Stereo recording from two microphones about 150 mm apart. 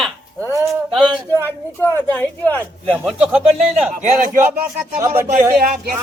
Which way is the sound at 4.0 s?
60° right (ahead or behind).